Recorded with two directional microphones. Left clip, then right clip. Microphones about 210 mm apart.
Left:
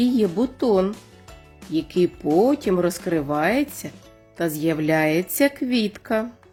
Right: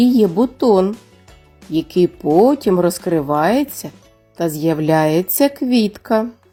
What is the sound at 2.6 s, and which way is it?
A woman's voice, 15° right (ahead or behind).